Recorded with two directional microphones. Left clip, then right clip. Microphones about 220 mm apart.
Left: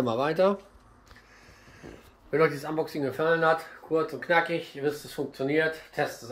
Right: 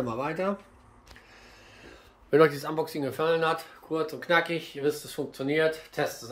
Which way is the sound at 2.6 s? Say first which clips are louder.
Left 1 dB; 20° right (ahead or behind).